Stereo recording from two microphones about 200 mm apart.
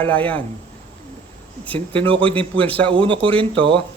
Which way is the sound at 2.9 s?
25° right (ahead or behind).